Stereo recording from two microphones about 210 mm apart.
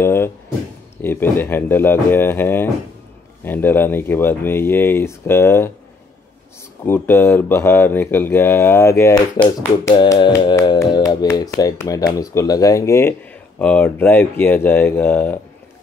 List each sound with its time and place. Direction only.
0.0 s a sound: 10° left (ahead or behind)
1.0 s speech: 10° left (ahead or behind)
6.9 s speech: 10° left (ahead or behind)
9.4 s music: 20° left (ahead or behind)
11.5 s speech: 15° left (ahead or behind)